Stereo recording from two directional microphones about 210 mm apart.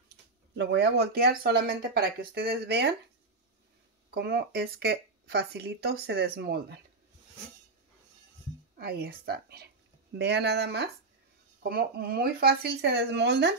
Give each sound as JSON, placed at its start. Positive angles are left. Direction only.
{"t": 0.1, "sound": "speech", "side_deg": -55}
{"t": 4.1, "sound": "speech", "side_deg": -50}
{"t": 8.7, "sound": "speech", "side_deg": -45}